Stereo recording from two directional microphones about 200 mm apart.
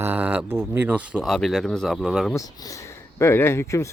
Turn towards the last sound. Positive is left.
turn(degrees=15)  # may be behind; listen again after turning